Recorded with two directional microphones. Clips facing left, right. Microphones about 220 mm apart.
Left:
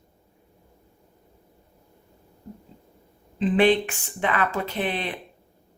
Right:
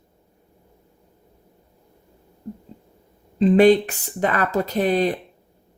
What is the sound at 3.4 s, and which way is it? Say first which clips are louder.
Speech: right 6 dB; 40° right (ahead or behind).